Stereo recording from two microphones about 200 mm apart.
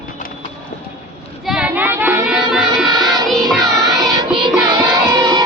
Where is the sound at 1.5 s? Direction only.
5° right (ahead or behind).